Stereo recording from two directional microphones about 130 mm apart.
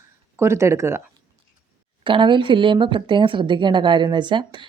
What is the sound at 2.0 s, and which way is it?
Speech, 40° right (ahead or behind).